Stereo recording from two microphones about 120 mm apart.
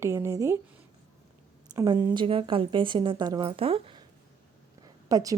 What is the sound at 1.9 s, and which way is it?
A woman's voice, 40° right (ahead or behind).